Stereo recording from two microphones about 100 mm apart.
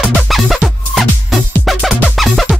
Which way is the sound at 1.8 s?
10° right (ahead or behind).